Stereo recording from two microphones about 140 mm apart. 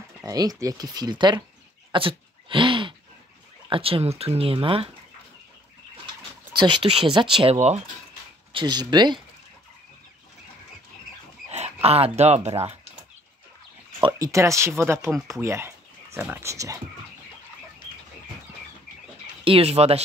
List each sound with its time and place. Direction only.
0.2 s speech: 25° right (ahead or behind)
1.9 s a sound: 40° right (ahead or behind)
3.6 s speech: 40° right (ahead or behind)
6.5 s speech: 35° right (ahead or behind)
8.5 s speech: 30° right (ahead or behind)
11.5 s speech: 50° right (ahead or behind)
14.0 s speech: 25° right (ahead or behind)
19.4 s speech: 45° right (ahead or behind)